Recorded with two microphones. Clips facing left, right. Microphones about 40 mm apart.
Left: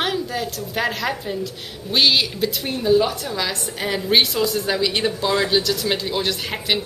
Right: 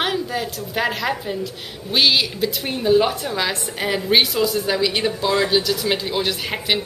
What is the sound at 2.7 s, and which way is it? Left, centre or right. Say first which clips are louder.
A woman's voice: right 1 dB; centre.